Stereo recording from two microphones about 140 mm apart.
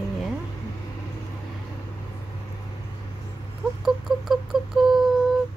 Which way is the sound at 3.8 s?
Centre (ahead or behind).